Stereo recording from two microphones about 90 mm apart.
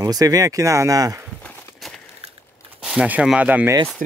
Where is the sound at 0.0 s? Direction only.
45° right (ahead or behind).